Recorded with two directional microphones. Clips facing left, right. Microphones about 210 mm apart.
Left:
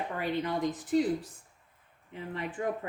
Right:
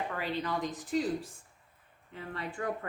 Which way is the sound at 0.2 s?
20° left (ahead or behind).